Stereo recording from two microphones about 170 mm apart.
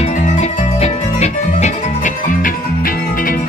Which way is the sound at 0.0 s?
45° left (ahead or behind).